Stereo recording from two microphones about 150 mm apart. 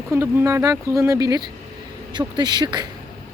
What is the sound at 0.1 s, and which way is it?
Speech, 15° right (ahead or behind).